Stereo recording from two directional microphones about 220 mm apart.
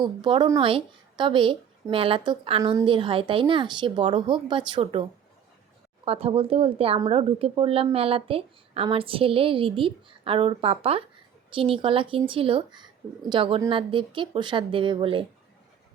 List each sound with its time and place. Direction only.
0.0 s a woman's voice: 20° right (ahead or behind)
6.1 s a woman's voice: 25° right (ahead or behind)